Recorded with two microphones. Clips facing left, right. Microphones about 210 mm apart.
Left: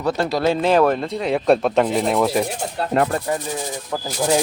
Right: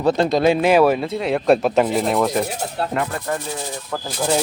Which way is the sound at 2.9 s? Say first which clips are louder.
Left 9 dB; 35° left (ahead or behind).